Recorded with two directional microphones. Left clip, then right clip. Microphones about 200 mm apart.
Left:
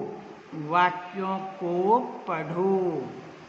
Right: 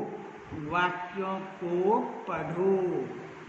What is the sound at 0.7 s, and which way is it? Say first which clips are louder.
Speech: left 5 dB; 50° left (ahead or behind).